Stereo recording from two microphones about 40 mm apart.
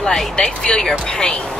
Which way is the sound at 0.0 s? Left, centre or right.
Centre.